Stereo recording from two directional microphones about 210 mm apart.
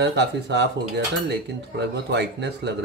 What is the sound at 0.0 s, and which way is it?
Speech, 55° right (ahead or behind).